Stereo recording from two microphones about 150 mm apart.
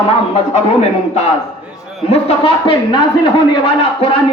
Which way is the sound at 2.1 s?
35° left (ahead or behind).